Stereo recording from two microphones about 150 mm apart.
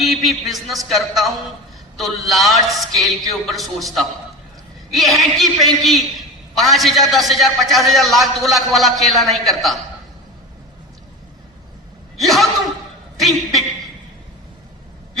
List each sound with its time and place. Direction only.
0.0 s a man's voice: centre (ahead or behind)
12.2 s a man's voice: centre (ahead or behind)
13.1 s a sound: centre (ahead or behind)